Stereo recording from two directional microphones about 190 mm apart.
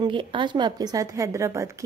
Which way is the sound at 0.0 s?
25° right (ahead or behind).